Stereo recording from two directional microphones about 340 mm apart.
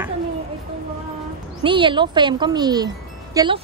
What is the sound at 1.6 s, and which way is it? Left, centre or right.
Speech, centre.